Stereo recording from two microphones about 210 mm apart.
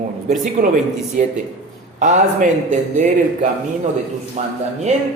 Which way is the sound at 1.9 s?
35° right (ahead or behind).